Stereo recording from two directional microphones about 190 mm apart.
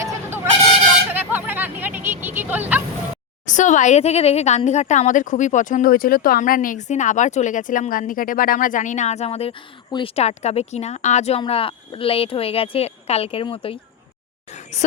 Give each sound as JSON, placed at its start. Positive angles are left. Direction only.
{"t": 1.1, "sound": "hubbub", "side_deg": -10}
{"t": 3.4, "sound": "speech", "side_deg": 40}
{"t": 14.5, "sound": "a sound", "side_deg": 35}